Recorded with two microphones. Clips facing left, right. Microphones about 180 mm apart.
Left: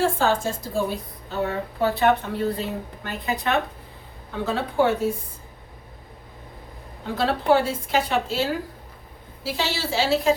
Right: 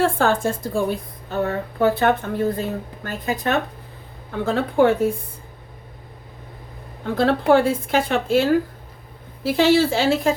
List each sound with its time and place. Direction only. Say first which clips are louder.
0.0 s a woman's voice: right 3 dB; 55° right (ahead or behind)
7.2 s a woman's voice: right 4 dB; 55° right (ahead or behind)